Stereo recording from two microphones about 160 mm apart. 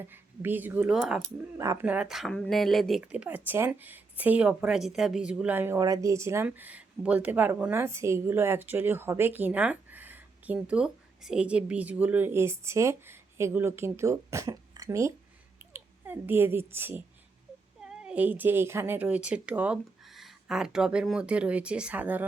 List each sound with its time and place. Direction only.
0.0 s speech: 10° right (ahead or behind)
1.5 s speech: 20° right (ahead or behind)
1.9 s a woman's voice: 5° right (ahead or behind)